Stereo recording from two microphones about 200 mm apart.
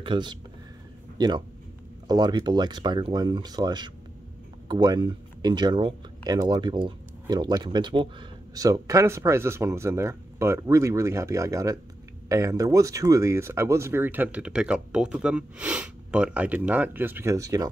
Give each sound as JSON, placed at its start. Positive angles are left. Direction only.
{"t": 0.0, "sound": "speech", "side_deg": -25}